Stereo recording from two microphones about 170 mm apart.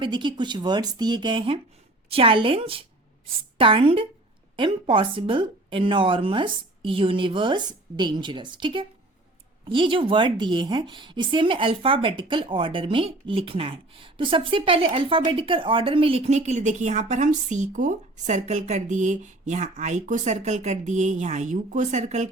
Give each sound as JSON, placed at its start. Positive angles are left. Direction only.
{"t": 0.0, "sound": "a woman's voice", "side_deg": -30}